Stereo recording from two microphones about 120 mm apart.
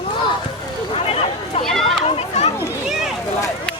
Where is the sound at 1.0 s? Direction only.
55° left (ahead or behind).